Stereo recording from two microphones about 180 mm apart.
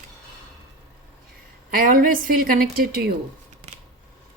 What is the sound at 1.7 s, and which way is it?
A woman's voice, 50° right (ahead or behind).